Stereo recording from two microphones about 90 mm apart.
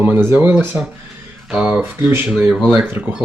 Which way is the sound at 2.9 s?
20° right (ahead or behind).